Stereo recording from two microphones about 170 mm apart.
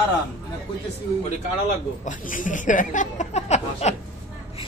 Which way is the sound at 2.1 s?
50° left (ahead or behind).